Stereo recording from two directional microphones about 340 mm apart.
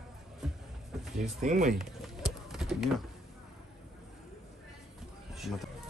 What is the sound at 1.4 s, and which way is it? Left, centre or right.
Speech, centre.